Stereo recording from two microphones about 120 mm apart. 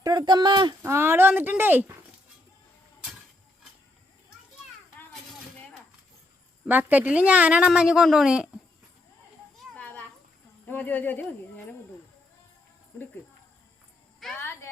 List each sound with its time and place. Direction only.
0.0 s speech: 30° right (ahead or behind)
0.8 s a woman's voice: 20° right (ahead or behind)
6.7 s a woman's voice: 15° right (ahead or behind)
9.7 s children playing: 10° left (ahead or behind)
10.7 s speech: 15° left (ahead or behind)
14.3 s a sound: 20° left (ahead or behind)